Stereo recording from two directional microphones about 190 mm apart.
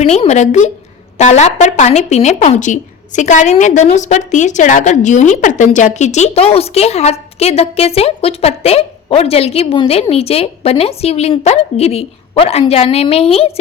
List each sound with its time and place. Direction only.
0.0 s a woman's voice: 35° left (ahead or behind)